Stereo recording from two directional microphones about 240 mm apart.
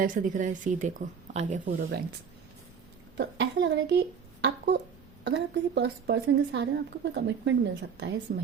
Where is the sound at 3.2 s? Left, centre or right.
Right.